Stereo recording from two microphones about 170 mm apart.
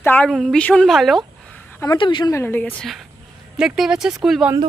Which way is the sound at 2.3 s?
15° left (ahead or behind).